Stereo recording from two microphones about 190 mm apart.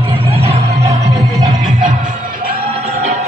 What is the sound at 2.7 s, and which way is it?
Music, 35° right (ahead or behind).